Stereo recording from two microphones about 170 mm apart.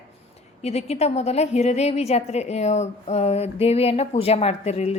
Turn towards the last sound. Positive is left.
turn(degrees=40)  # may be behind; listen again after turning